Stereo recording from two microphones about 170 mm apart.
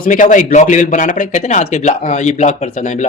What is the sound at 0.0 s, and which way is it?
Speech, 50° left (ahead or behind).